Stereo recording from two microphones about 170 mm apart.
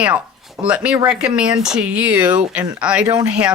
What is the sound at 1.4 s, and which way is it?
Speech, 5° right (ahead or behind).